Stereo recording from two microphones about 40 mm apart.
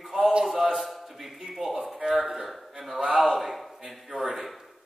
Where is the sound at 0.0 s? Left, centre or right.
Centre.